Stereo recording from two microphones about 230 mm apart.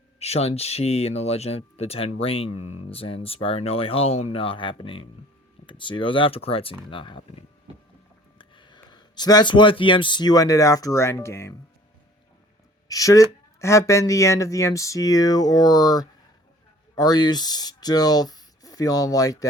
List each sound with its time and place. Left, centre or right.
0.2 s speech: left
12.9 s speech: centre